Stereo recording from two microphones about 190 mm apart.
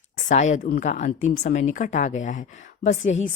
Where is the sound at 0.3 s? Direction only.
40° left (ahead or behind).